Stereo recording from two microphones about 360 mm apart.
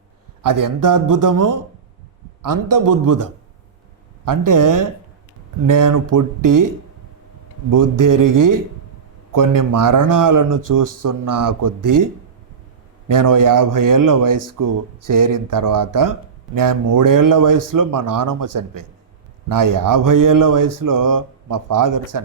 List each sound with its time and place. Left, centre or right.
0.4 s speech: right
7.7 s speech: right
13.1 s speech: right